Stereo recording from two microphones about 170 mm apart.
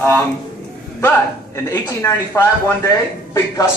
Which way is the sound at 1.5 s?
15° left (ahead or behind).